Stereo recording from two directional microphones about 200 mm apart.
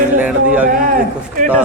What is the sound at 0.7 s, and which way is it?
Speech, 45° right (ahead or behind).